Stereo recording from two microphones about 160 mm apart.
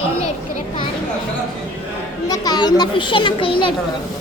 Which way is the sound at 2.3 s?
25° left (ahead or behind).